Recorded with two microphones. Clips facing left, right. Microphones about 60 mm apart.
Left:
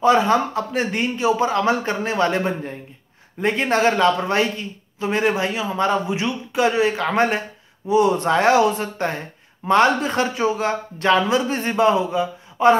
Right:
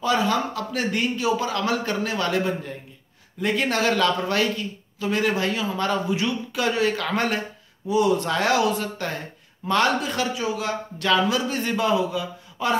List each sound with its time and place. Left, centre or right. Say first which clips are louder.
0.0 s speech: left 6 dB; left